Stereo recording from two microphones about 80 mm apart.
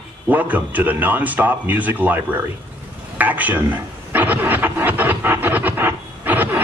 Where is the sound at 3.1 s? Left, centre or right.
Right.